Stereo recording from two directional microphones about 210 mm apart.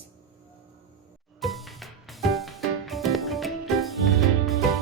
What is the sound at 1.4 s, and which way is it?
Music, centre (ahead or behind).